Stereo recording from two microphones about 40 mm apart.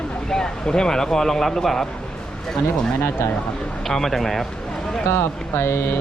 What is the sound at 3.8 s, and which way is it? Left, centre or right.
Speech, centre.